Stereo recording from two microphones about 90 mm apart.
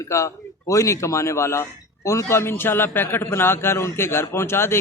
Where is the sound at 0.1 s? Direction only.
30° left (ahead or behind).